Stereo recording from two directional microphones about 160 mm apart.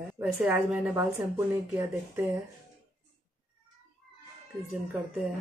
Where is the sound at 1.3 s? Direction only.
15° right (ahead or behind).